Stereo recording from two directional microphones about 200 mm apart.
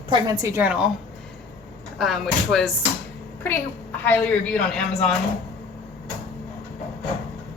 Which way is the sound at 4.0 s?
10° left (ahead or behind).